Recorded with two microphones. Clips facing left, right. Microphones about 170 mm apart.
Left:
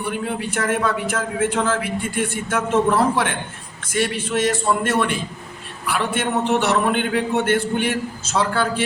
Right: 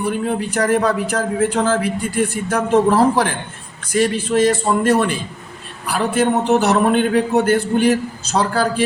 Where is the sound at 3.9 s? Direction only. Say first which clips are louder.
Right 5 dB; 30° right (ahead or behind).